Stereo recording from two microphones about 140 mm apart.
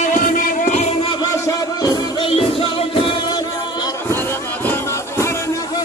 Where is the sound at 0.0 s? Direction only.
70° left (ahead or behind); by 1.2 s 45° left (ahead or behind).